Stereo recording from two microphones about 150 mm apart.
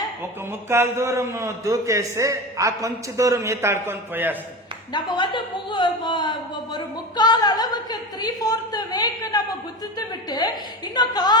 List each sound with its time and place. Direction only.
0.7 s a man's voice: 15° right (ahead or behind)
4.9 s speech: 30° left (ahead or behind)
6.7 s a sound: 30° left (ahead or behind)
10.2 s speech: 25° left (ahead or behind)